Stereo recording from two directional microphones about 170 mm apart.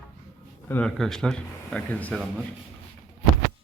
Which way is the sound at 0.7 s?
5° left (ahead or behind).